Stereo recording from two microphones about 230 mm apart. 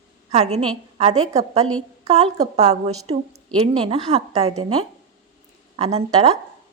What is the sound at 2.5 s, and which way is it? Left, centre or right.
A woman's voice, right.